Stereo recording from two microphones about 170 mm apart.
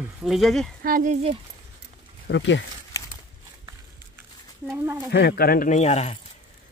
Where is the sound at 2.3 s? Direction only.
90° left.